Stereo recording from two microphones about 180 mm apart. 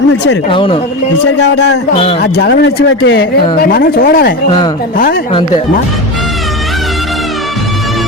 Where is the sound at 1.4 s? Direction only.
70° left (ahead or behind); by 5.2 s 50° left (ahead or behind).